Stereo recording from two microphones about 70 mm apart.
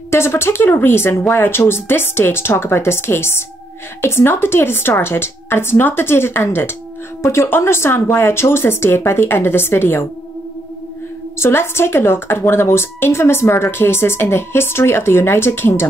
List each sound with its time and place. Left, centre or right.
0.1 s speech: left
11.3 s speech: left